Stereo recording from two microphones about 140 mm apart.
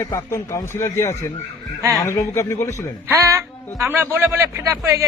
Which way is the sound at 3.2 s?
20° right (ahead or behind).